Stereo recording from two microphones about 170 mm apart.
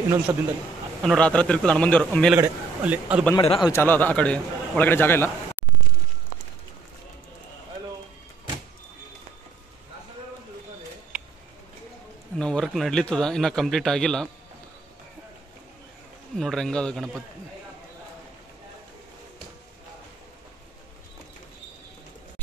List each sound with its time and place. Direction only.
0.3 s a man's voice: 15° right (ahead or behind)
1.0 s a man's voice: 5° left (ahead or behind)
2.3 s a man's voice: 10° right (ahead or behind)
3.3 s a man's voice: 30° left (ahead or behind)
3.7 s a man's voice: 10° left (ahead or behind)
11.1 s a sound: 5° right (ahead or behind)
12.4 s a man's voice: 5° left (ahead or behind)
16.3 s a man's voice: 5° left (ahead or behind)